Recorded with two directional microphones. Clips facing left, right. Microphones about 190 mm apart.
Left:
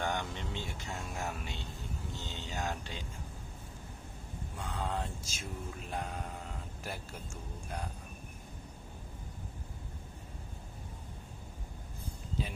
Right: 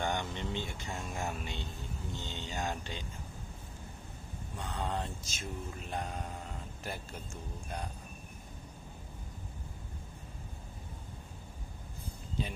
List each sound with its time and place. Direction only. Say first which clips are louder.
0.0 s a sound: right 1 dB; 5° left (ahead or behind)
0.9 s speech: right 1 dB; 5° right (ahead or behind)
1.2 s mantra: right 1 dB; centre (ahead or behind)
4.5 s mantra: right 1 dB; 5° left (ahead or behind)
12.4 s mantra: right 1 dB; 5° left (ahead or behind)